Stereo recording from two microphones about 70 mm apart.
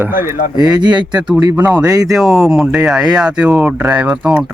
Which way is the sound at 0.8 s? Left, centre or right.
Right.